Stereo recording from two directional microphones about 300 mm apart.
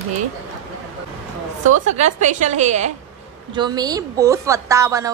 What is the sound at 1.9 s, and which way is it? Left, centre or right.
A woman's voice, right.